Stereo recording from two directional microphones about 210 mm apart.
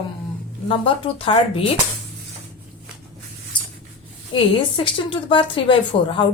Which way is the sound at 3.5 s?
20° left (ahead or behind).